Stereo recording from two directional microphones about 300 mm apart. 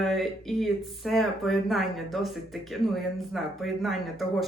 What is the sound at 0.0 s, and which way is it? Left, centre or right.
Speech, centre.